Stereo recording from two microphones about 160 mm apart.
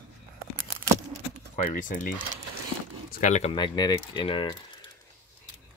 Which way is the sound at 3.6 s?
25° left (ahead or behind).